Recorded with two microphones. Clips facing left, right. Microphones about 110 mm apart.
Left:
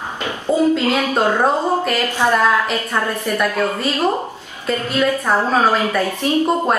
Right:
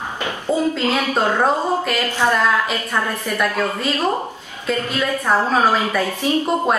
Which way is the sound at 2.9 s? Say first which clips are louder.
Left 2 dB; centre (ahead or behind).